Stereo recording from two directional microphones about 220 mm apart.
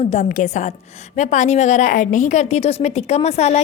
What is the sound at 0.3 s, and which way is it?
A woman's voice, 35° left (ahead or behind).